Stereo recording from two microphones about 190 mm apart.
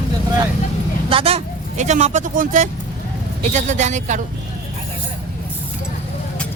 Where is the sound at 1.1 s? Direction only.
30° right (ahead or behind).